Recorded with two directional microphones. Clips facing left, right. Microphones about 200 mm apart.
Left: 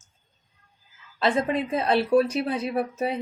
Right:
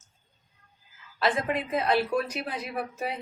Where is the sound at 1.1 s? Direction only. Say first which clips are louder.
Left 4 dB; 25° left (ahead or behind).